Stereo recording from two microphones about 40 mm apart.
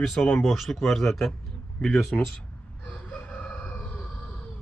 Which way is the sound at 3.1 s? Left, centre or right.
Left.